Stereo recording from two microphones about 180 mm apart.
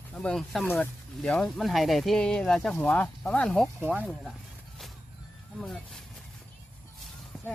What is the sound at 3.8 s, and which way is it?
Speech, 10° right (ahead or behind).